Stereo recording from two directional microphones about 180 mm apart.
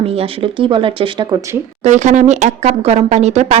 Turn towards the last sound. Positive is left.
turn(degrees=-40)  # may be behind; listen again after turning